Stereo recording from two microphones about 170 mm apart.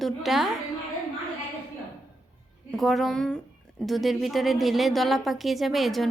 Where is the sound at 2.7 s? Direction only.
Centre (ahead or behind).